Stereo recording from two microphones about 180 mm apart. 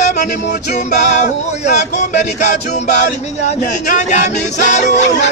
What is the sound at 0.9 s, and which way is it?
Speech, 45° left (ahead or behind).